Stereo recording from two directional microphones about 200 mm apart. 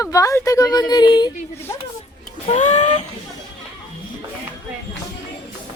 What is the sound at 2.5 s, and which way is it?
Speech, 35° left (ahead or behind).